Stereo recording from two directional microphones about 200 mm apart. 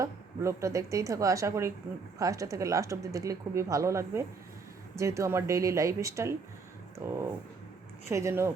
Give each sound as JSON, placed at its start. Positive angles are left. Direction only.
{"t": 0.0, "sound": "speech", "side_deg": -15}